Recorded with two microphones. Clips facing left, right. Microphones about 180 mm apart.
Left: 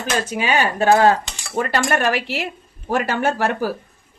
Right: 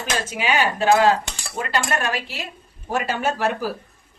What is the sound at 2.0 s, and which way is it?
A woman's voice, 75° left (ahead or behind).